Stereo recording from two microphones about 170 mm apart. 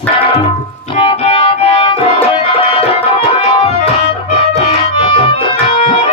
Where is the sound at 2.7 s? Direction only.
35° left (ahead or behind).